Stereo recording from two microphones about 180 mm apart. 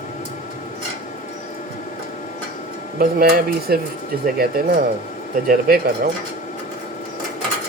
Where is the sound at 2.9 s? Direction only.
60° right (ahead or behind).